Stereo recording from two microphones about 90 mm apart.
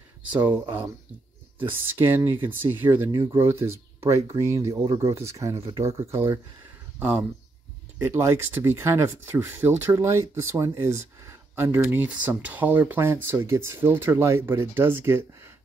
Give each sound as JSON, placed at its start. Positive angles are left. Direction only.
{"t": 0.3, "sound": "speech", "side_deg": -20}
{"t": 7.0, "sound": "speech", "side_deg": -20}
{"t": 8.0, "sound": "speech", "side_deg": -30}